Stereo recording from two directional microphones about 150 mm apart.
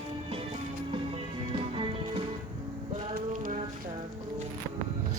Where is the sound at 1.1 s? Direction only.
35° right (ahead or behind).